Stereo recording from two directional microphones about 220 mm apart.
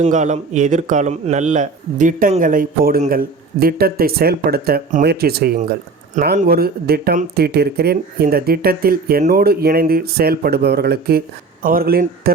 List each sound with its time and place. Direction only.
0.0 s speech: 35° right (ahead or behind)